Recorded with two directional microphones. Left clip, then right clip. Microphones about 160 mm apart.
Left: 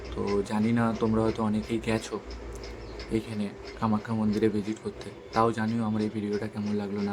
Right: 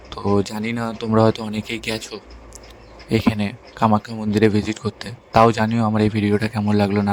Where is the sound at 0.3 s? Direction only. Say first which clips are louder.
Right 2 dB; 65° right (ahead or behind).